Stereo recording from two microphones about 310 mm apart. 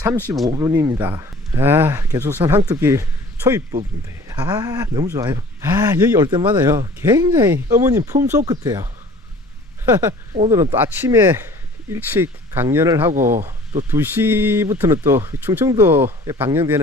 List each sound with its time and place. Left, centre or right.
0.0 s speech: centre
10.3 s speech: centre